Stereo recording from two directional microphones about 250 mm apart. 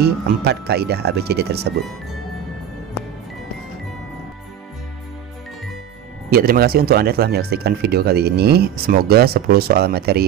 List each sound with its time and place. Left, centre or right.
0.0 s speech: right
6.3 s speech: right